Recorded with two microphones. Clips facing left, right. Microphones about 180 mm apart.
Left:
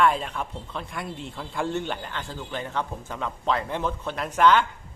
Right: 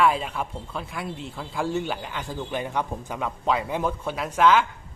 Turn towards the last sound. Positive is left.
turn(degrees=-5)  # may be behind; listen again after turning